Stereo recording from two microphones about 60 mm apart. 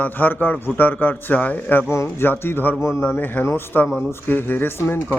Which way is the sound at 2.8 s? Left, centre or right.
Left.